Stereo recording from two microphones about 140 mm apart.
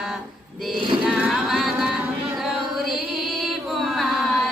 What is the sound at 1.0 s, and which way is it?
Music, 5° right (ahead or behind).